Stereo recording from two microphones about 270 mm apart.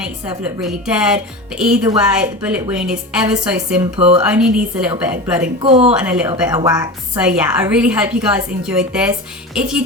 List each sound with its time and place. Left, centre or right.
0.6 s a woman's voice: centre
3.9 s a woman's voice: right
4.2 s a woman's voice: centre
5.6 s a woman's voice: right
5.9 s a woman's voice: centre